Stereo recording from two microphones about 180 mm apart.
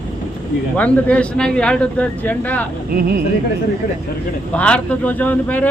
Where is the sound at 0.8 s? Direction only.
10° left (ahead or behind).